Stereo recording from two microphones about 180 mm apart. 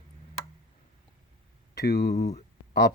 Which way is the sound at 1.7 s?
65° left (ahead or behind).